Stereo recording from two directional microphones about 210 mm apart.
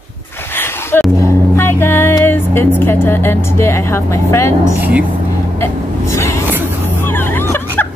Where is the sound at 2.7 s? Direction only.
10° left (ahead or behind).